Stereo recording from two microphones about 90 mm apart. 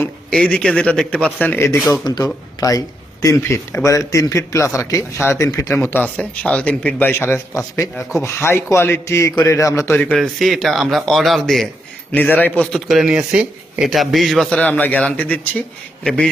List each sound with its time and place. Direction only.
0.3 s a man's voice: 10° left (ahead or behind); by 1.8 s 25° left (ahead or behind)
2.0 s a man's voice: 50° left (ahead or behind)
5.1 s speech: 25° left (ahead or behind)
5.5 s a man's voice: 40° left (ahead or behind)
5.7 s speech: 25° left (ahead or behind)
6.0 s a man's voice: 15° left (ahead or behind)
7.1 s a man's voice: 25° left (ahead or behind)
9.9 s speech: 20° left (ahead or behind)
10.2 s speech: centre (ahead or behind)
12.1 s a man's voice: 15° left (ahead or behind)
12.7 s speech: 5° right (ahead or behind)
14.7 s a man's voice: 20° left (ahead or behind)